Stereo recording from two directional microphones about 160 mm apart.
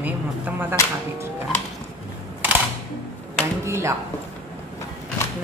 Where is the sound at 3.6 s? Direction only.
15° right (ahead or behind).